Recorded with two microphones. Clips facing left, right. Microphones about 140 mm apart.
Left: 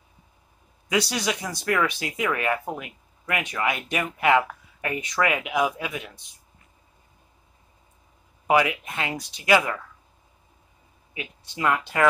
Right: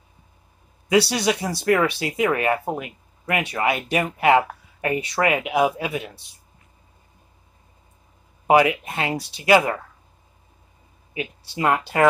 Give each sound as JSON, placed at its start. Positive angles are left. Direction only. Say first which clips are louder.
{"t": 0.8, "sound": "speech", "louder": "right 6 dB", "side_deg": -30}
{"t": 8.5, "sound": "speech", "louder": "right 5 dB", "side_deg": -30}
{"t": 11.1, "sound": "speech", "louder": "right 5 dB", "side_deg": -35}